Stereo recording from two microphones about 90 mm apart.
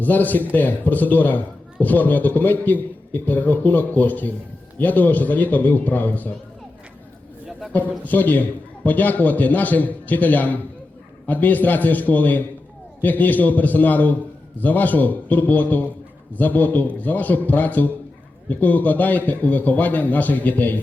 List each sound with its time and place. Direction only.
0.0 s a man's voice: 20° left (ahead or behind)
7.7 s a man's voice: 20° left (ahead or behind)